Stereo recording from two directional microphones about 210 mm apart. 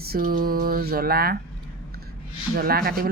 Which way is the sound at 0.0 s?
45° right (ahead or behind).